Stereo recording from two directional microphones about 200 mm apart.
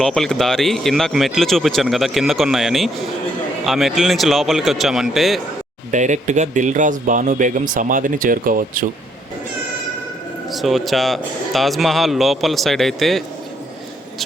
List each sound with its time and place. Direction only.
0.0 s speech: 5° left (ahead or behind)
5.9 s speech: 40° right (ahead or behind)
10.5 s speech: centre (ahead or behind)